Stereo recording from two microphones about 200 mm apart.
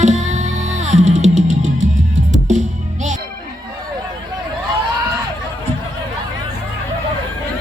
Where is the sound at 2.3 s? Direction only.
35° right (ahead or behind).